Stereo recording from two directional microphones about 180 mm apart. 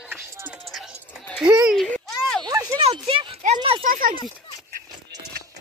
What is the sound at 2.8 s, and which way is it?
Clip-clop, 30° right (ahead or behind).